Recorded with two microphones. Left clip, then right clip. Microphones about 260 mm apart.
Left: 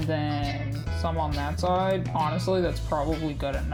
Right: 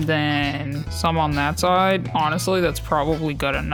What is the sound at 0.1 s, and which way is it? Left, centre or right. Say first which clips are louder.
Speech: right 9 dB; right.